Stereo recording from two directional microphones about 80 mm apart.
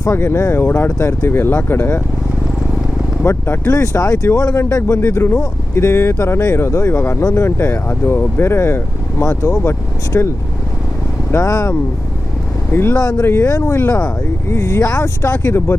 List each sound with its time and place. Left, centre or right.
0.1 s speech: left
3.2 s speech: left
3.8 s speech: left
11.3 s speech: left
12.7 s speech: left
13.0 s speech: left
13.2 s speech: left